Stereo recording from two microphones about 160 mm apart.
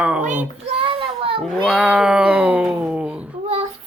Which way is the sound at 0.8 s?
35° right (ahead or behind).